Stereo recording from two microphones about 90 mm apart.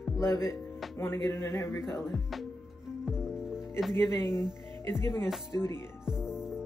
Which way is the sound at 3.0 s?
5° right (ahead or behind).